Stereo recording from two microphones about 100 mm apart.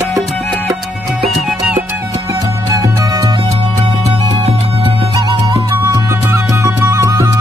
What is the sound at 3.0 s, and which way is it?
Music, 35° right (ahead or behind).